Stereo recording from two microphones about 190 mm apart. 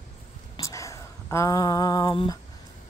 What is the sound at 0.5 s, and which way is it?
Speech, 15° left (ahead or behind).